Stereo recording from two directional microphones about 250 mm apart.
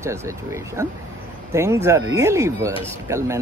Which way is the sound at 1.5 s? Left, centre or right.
Centre.